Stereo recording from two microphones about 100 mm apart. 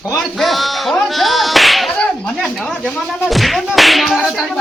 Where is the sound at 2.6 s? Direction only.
Centre (ahead or behind).